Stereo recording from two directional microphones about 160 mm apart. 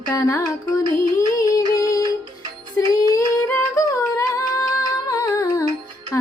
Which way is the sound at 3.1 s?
20° left (ahead or behind).